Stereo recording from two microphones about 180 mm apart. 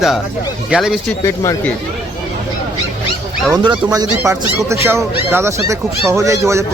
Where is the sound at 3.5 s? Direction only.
20° right (ahead or behind).